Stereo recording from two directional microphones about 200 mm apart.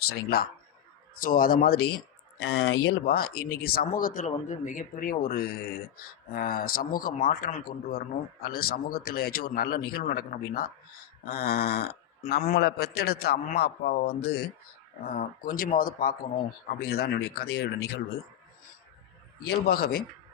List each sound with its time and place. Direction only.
0.1 s speech: 50° left (ahead or behind)
19.5 s speech: 50° left (ahead or behind)